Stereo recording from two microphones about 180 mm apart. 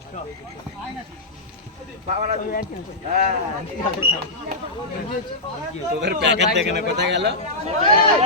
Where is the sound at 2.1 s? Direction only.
40° right (ahead or behind).